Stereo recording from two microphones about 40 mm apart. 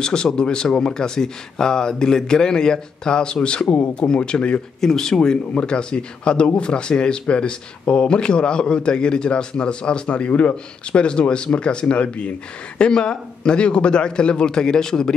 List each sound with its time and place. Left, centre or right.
0.0 s speech: centre
4.7 s speech: centre